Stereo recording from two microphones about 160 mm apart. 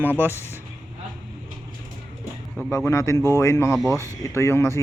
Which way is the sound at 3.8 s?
15° right (ahead or behind).